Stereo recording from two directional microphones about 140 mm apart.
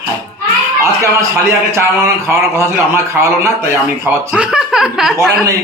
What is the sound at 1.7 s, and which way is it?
A man's voice, 20° right (ahead or behind).